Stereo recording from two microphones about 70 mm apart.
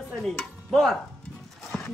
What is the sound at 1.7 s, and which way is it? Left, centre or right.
Clip-clop, centre.